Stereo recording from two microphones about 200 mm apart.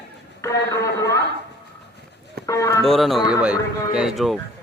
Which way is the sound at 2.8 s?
Centre (ahead or behind).